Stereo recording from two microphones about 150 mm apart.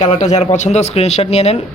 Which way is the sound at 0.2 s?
50° left (ahead or behind).